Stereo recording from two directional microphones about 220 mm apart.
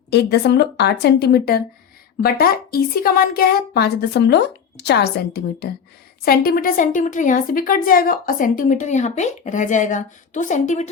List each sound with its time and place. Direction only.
0.1 s a woman's voice: 50° left (ahead or behind); by 10.8 s 35° left (ahead or behind)